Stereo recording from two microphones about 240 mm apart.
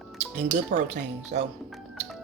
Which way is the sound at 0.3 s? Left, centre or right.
Right.